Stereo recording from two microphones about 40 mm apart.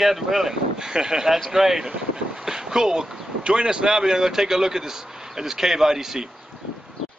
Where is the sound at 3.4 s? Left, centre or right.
Centre.